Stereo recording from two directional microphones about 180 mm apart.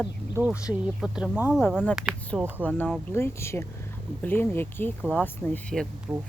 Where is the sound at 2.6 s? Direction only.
10° left (ahead or behind).